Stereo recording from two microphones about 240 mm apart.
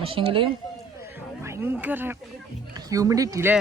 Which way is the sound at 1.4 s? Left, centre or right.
Centre.